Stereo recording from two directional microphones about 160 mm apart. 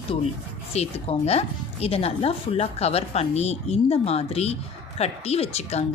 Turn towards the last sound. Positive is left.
turn(degrees=40)  # may be behind; listen again after turning